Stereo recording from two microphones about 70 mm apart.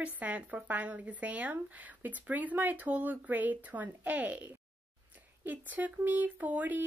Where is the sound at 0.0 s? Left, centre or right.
Right.